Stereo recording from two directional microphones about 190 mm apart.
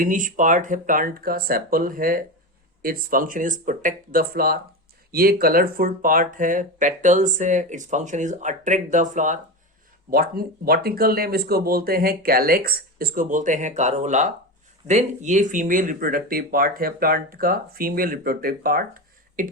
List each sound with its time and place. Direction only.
0.0 s speech: 45° right (ahead or behind)
10.1 s speech: 50° right (ahead or behind)